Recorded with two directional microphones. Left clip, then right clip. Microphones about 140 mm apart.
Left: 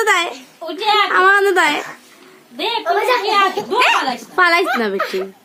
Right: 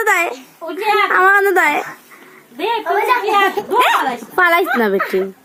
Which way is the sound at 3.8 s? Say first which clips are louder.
Even; 25° right (ahead or behind).